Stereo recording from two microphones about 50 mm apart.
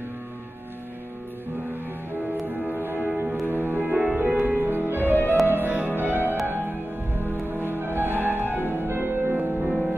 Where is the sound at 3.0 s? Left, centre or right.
Right.